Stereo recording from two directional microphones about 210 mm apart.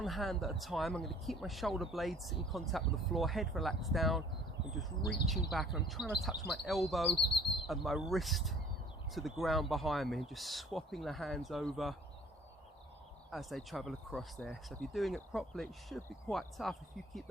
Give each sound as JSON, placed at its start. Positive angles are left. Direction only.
{"t": 0.0, "sound": "speech", "side_deg": 0}
{"t": 13.3, "sound": "speech", "side_deg": 0}